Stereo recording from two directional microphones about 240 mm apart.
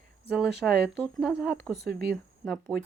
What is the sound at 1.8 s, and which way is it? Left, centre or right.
Speech, right.